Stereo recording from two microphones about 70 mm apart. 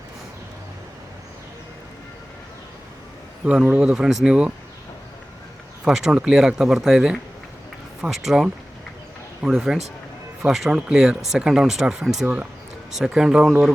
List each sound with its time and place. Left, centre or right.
3.4 s speech: centre
5.8 s speech: centre